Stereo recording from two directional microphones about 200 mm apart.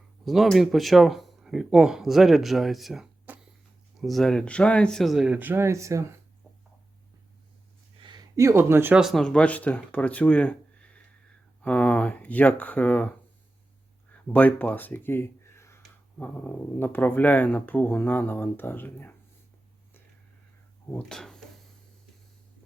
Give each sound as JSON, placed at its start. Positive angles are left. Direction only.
{"t": 0.3, "sound": "speech", "side_deg": 0}
{"t": 8.0, "sound": "speech", "side_deg": -20}
{"t": 14.3, "sound": "speech", "side_deg": 10}
{"t": 20.9, "sound": "speech", "side_deg": 5}